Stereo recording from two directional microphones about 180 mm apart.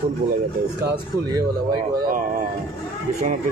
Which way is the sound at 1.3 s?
20° right (ahead or behind).